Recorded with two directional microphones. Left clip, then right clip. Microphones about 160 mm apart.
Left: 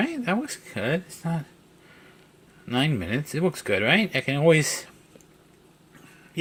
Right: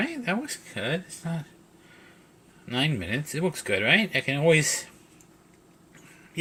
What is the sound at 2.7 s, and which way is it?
Speech, 30° left (ahead or behind).